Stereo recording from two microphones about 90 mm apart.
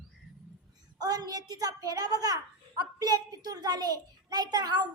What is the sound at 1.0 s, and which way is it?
A child's voice, 45° right (ahead or behind).